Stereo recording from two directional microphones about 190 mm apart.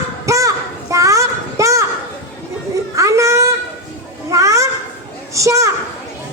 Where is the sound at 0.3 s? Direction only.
15° right (ahead or behind).